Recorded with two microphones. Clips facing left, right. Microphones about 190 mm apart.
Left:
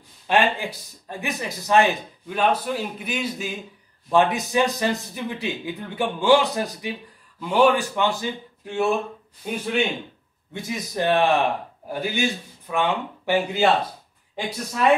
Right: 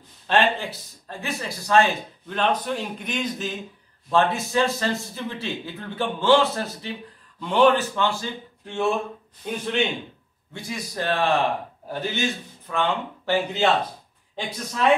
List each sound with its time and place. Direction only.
0.3 s speech: 10° left (ahead or behind)
10.5 s a man's voice: 20° left (ahead or behind)